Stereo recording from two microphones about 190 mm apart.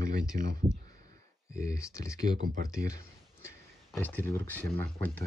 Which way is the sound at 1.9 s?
15° left (ahead or behind).